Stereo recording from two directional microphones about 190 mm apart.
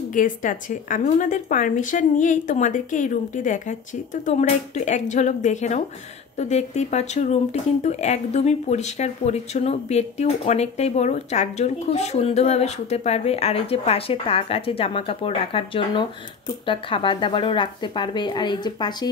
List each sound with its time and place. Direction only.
0.1 s speech: 40° left (ahead or behind); by 19.0 s 20° left (ahead or behind)